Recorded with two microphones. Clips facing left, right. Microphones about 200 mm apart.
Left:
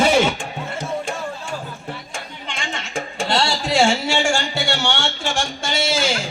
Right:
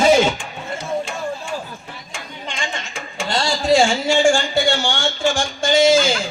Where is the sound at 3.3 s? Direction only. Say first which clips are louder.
Right 4 dB; 70° left (ahead or behind).